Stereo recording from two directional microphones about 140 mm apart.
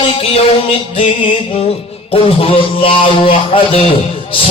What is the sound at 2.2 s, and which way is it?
A man's voice, 45° left (ahead or behind).